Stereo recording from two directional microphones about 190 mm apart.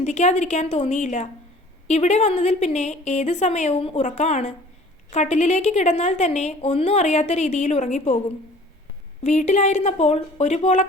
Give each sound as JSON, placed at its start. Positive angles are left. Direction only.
{"t": 0.0, "sound": "a woman's voice", "side_deg": 35}
{"t": 9.2, "sound": "a woman's voice", "side_deg": 40}